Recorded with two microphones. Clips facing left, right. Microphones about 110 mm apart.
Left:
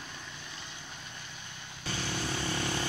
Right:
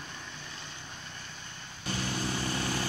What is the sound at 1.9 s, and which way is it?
Vehicle, 35° right (ahead or behind).